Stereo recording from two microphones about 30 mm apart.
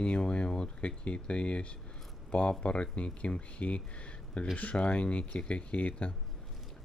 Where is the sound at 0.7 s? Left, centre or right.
Left.